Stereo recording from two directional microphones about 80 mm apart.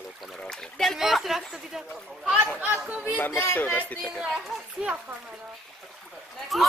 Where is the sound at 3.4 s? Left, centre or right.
Left.